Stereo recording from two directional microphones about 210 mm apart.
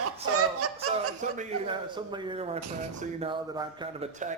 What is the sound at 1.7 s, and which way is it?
Speech, 20° right (ahead or behind).